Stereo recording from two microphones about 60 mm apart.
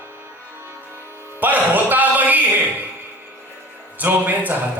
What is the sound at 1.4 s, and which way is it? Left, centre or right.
Music, right.